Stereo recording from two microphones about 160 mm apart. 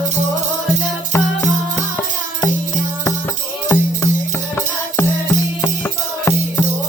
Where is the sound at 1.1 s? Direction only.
15° left (ahead or behind).